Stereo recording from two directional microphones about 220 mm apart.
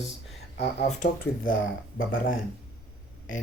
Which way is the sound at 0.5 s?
35° left (ahead or behind).